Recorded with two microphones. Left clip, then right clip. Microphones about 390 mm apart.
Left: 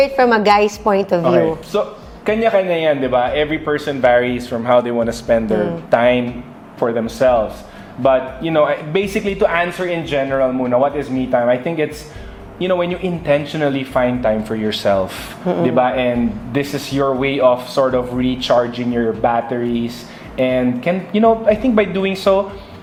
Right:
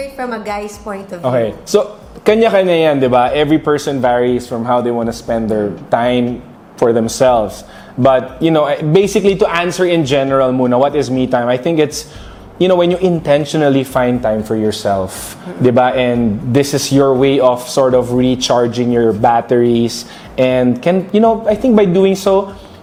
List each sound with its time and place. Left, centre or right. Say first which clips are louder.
0.0 s a woman's voice: left 9 dB; left
1.2 s a man's voice: left 1 dB; right
15.6 s a man's voice: right 5 dB; right